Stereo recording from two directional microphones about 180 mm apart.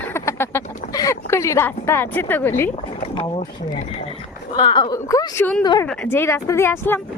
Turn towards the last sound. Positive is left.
turn(degrees=15)  # may be behind; listen again after turning